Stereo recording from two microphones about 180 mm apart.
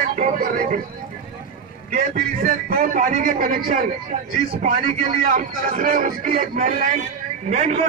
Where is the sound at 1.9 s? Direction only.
50° right (ahead or behind).